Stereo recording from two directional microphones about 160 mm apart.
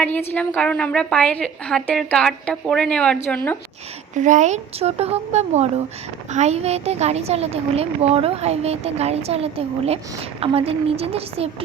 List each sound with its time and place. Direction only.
0.0 s a woman's voice: 10° left (ahead or behind)
4.1 s a woman's voice: 50° right (ahead or behind)